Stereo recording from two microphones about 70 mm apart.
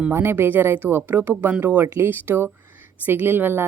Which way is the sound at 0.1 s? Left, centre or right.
Right.